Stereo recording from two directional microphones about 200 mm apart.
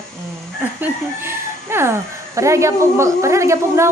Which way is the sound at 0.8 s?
10° right (ahead or behind).